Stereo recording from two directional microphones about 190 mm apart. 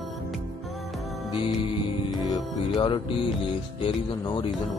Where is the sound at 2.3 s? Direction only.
25° left (ahead or behind).